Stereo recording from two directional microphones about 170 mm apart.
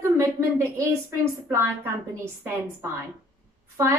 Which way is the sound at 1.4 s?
15° right (ahead or behind).